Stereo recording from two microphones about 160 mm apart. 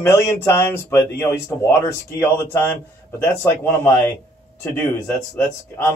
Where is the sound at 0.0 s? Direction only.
20° left (ahead or behind).